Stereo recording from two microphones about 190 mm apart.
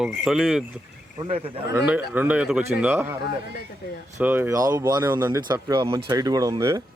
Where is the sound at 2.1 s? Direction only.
10° right (ahead or behind).